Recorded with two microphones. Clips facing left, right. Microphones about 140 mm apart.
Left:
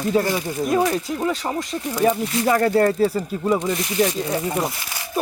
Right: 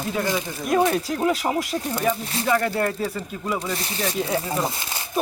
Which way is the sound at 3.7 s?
30° right (ahead or behind).